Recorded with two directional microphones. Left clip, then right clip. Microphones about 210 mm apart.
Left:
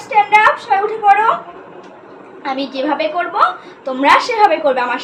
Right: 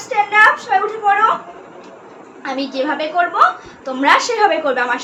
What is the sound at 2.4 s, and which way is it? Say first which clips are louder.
A woman's voice: left 1 dB; 10° right (ahead or behind).